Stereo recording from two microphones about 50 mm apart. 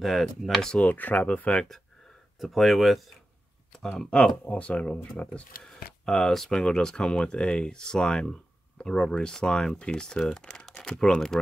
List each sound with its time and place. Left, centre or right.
0.0 s speech: centre
0.7 s speech: left
2.4 s speech: centre
4.5 s speech: left
6.0 s speech: centre
10.4 s typing: centre
10.8 s speech: centre